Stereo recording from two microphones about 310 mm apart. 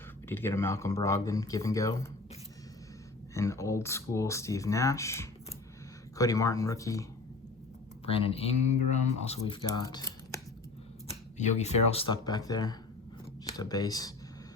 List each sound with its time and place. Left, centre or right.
0.3 s speech: centre
3.3 s speech: centre
11.1 s speech: left